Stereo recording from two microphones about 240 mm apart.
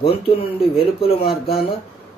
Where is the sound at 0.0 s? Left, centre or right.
Left.